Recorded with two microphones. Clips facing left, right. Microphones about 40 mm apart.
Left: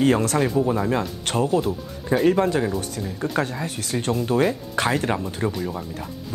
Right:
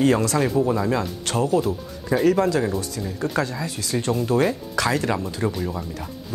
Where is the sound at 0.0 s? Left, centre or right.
Left.